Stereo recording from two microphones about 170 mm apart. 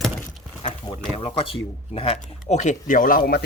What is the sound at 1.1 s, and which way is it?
Speech, 35° left (ahead or behind).